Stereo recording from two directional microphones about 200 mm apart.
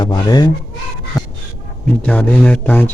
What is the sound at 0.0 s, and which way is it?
Speech, 20° left (ahead or behind).